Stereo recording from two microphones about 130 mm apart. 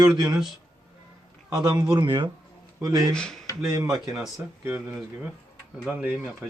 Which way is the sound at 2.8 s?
25° right (ahead or behind).